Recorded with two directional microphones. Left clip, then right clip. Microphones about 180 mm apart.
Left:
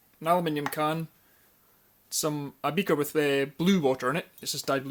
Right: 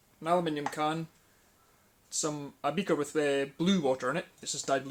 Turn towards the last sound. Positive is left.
turn(degrees=55)  # may be behind; listen again after turning